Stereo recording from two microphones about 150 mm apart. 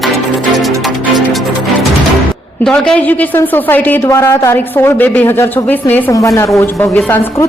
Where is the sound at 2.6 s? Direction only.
5° left (ahead or behind).